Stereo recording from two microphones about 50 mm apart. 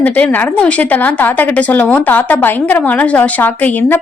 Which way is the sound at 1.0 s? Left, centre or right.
Left.